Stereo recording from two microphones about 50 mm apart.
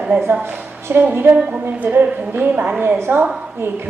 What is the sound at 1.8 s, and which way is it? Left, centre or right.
Speech, right.